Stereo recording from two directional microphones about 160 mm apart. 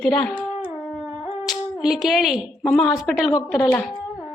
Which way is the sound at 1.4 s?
Centre (ahead or behind).